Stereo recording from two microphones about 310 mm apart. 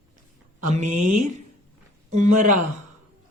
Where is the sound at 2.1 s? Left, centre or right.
Right.